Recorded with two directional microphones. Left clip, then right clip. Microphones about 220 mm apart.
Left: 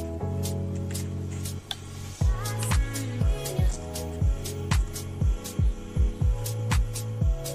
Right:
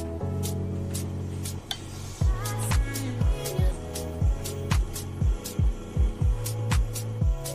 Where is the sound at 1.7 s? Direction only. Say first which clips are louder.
Right 2 dB; centre (ahead or behind).